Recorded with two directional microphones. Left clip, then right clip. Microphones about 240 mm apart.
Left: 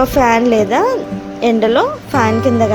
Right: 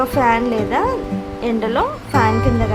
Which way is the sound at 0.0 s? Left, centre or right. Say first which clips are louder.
Left 4 dB; left.